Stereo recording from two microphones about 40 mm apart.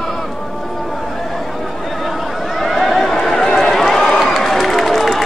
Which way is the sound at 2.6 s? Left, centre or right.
Centre.